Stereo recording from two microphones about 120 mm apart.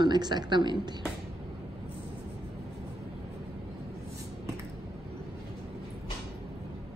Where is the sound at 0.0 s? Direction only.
35° right (ahead or behind).